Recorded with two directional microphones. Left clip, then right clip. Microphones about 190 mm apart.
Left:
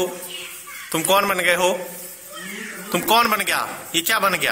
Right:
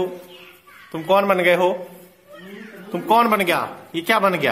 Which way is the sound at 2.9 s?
10° right (ahead or behind).